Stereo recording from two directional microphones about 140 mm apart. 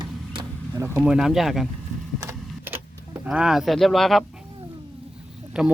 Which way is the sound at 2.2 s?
20° right (ahead or behind).